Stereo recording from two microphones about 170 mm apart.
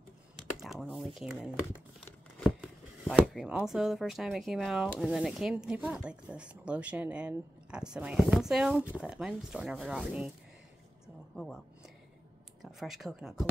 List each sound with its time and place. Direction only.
0.4 s speech: centre (ahead or behind)
3.1 s speech: 5° right (ahead or behind)
11.3 s a sound: centre (ahead or behind)
12.6 s speech: centre (ahead or behind)